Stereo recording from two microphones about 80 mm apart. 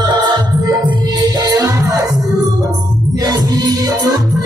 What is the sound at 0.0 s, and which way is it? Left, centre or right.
Music, right.